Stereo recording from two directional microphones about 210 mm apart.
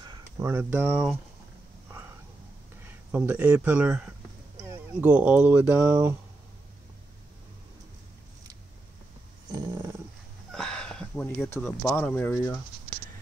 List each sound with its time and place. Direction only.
0.0 s speech: 15° right (ahead or behind)
2.9 s speech: 10° right (ahead or behind)
9.5 s dog: 20° right (ahead or behind)
10.5 s speech: 5° left (ahead or behind)